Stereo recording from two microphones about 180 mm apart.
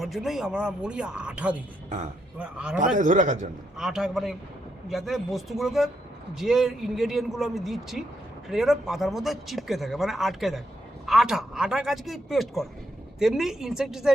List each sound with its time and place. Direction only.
0.0 s speech: centre (ahead or behind)
2.7 s speech: 45° right (ahead or behind)
3.8 s speech: 5° right (ahead or behind)